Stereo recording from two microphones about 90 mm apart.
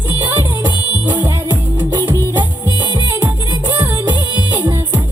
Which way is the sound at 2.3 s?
55° right (ahead or behind).